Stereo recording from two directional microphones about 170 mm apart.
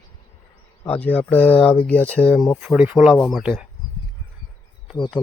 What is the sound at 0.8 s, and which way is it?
Speech, 10° left (ahead or behind).